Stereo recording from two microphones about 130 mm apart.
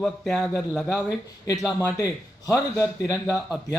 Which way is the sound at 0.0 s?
5° left (ahead or behind).